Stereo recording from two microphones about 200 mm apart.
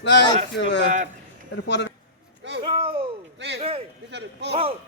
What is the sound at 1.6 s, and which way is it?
Speech, 60° left (ahead or behind).